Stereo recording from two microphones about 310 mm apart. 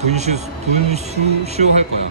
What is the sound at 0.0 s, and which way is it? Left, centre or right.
A man's voice, right.